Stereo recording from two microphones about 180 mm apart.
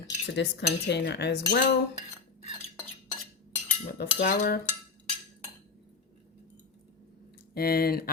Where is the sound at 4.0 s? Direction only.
60° left (ahead or behind).